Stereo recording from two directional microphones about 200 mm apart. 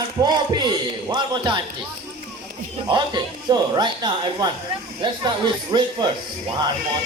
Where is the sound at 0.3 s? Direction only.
20° right (ahead or behind).